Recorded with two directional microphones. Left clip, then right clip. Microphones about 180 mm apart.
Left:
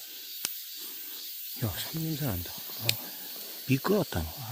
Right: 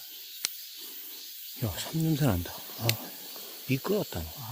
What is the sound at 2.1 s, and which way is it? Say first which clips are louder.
Speech: right 6 dB; 50° right (ahead or behind).